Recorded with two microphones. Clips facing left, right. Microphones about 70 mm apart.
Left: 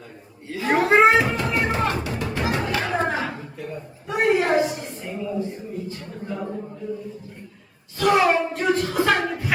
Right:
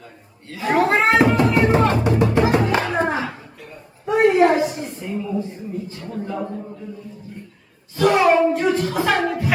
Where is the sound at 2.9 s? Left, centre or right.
Right.